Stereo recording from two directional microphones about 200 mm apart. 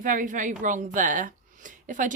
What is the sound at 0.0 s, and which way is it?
A woman's voice, 40° right (ahead or behind).